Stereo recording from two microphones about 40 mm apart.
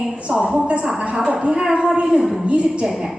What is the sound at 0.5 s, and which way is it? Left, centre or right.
A woman's voice, right.